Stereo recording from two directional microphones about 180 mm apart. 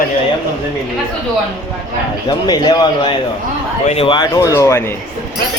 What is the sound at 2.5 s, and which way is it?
Speech, 20° left (ahead or behind).